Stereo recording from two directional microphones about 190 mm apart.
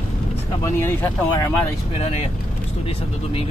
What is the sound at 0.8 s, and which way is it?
Speech, 15° left (ahead or behind).